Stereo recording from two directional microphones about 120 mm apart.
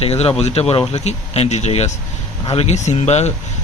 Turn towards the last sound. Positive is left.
turn(degrees=65)  # may be behind; listen again after turning